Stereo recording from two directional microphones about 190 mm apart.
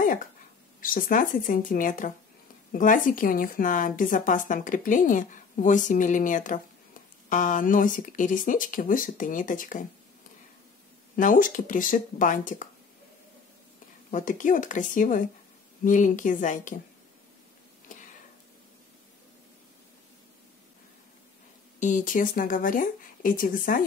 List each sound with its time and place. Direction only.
0.7 s a woman's voice: 45° left (ahead or behind)
11.1 s a woman's voice: 45° left (ahead or behind)
14.1 s a woman's voice: 45° left (ahead or behind)
21.7 s a woman's voice: 40° left (ahead or behind)